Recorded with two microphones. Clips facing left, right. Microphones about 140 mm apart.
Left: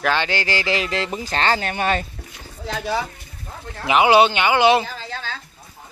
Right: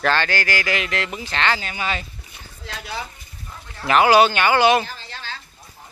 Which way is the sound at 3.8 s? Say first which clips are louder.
Even; 15° left (ahead or behind).